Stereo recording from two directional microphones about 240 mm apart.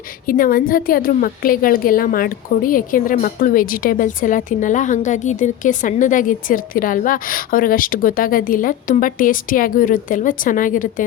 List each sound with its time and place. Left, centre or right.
0.3 s a woman's voice: left